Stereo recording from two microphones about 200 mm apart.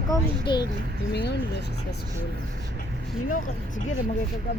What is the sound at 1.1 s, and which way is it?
Speech, 55° left (ahead or behind).